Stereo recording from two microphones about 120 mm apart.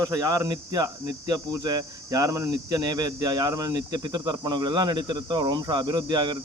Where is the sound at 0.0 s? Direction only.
30° right (ahead or behind).